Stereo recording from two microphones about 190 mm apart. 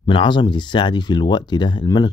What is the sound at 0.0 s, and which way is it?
Speech, 25° left (ahead or behind).